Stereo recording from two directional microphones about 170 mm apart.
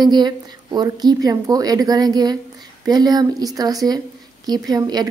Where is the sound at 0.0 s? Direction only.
25° right (ahead or behind).